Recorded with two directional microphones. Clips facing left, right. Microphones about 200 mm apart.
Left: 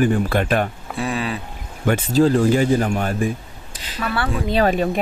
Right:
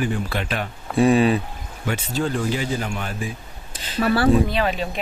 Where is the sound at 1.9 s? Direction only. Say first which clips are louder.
Left 8 dB; 40° left (ahead or behind).